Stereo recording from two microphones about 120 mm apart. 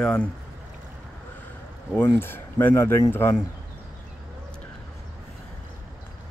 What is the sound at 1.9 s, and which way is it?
Speech, 20° left (ahead or behind).